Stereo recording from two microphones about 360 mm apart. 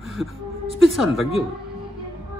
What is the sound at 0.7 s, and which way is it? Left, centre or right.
Speech, centre.